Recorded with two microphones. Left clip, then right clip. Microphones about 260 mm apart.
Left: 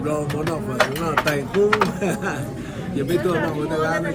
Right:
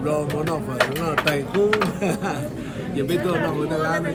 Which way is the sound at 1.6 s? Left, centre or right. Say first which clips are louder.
Left 2 dB; centre.